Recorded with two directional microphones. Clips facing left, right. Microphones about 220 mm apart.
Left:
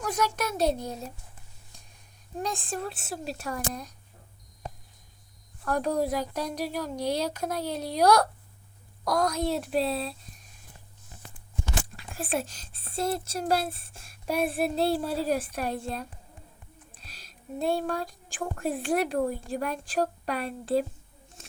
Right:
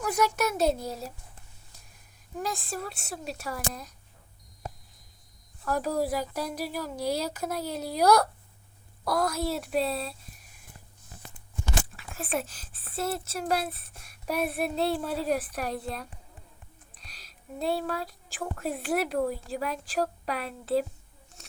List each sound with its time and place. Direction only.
0.0 s a sound: 10° right (ahead or behind)
0.3 s speech: 10° right (ahead or behind)
2.4 s speech: centre (ahead or behind)
5.6 s speech: 5° right (ahead or behind)
12.1 s speech: 30° left (ahead or behind)
12.5 s speech: 5° right (ahead or behind)
13.5 s a woman's voice: 30° left (ahead or behind)
15.0 s speech: centre (ahead or behind)